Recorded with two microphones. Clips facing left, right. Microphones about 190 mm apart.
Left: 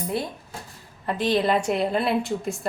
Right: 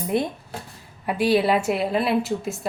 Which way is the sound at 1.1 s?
10° right (ahead or behind).